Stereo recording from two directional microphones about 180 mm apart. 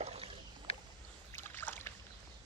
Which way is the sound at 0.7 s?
35° left (ahead or behind).